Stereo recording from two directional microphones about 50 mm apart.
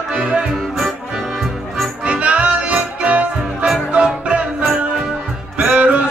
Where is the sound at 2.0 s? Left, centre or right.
Right.